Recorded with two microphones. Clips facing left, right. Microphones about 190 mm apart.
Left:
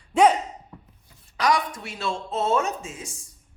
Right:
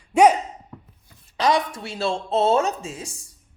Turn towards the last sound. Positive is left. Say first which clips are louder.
# right 3 dB
turn(degrees=-35)  # may be behind; listen again after turning